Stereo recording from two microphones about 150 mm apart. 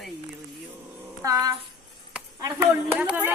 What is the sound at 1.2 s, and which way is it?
Speech, 25° right (ahead or behind).